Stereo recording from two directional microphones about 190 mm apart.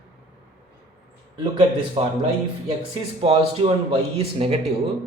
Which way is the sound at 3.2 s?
30° right (ahead or behind).